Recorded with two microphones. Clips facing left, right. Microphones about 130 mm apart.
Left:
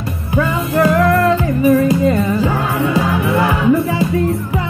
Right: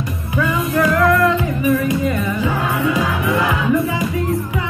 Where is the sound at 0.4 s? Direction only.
35° left (ahead or behind).